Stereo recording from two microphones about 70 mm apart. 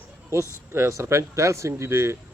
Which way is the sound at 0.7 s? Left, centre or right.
Right.